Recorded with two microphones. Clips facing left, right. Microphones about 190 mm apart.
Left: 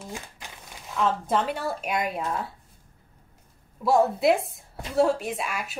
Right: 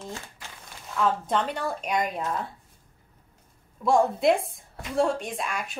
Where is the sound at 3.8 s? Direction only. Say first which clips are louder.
Left 1 dB; 5° left (ahead or behind).